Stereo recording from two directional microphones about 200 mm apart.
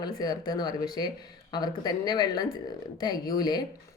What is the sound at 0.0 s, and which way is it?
Speech, 20° left (ahead or behind).